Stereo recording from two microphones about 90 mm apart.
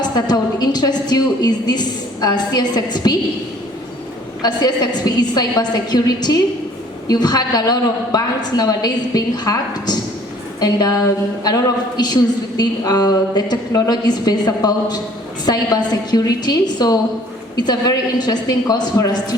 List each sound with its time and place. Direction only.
0.3 s a woman's voice: 50° left (ahead or behind)
4.4 s a woman's voice: 50° left (ahead or behind)